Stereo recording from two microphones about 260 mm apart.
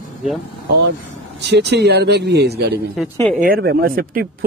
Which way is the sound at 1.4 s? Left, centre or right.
Right.